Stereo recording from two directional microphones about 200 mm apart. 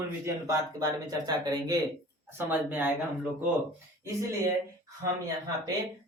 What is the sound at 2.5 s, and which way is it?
Speech, 10° right (ahead or behind).